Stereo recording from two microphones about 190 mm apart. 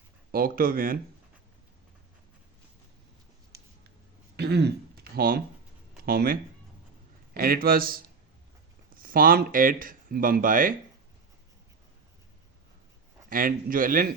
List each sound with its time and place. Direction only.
0.3 s speech: 50° right (ahead or behind)
4.4 s throat clearing: 60° right (ahead or behind)
5.1 s speech: 50° right (ahead or behind)
9.0 s speech: 50° right (ahead or behind)
13.3 s speech: 45° right (ahead or behind)